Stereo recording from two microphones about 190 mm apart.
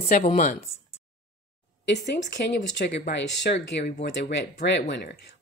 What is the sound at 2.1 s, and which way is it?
Speech, 60° left (ahead or behind).